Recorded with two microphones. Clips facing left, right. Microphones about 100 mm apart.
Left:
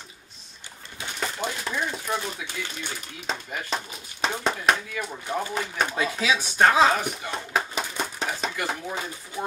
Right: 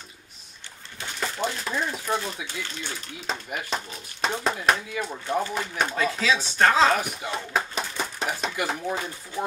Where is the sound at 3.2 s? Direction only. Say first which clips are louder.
Even; 5° right (ahead or behind).